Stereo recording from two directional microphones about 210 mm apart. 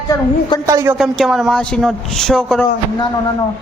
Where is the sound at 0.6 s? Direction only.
15° right (ahead or behind).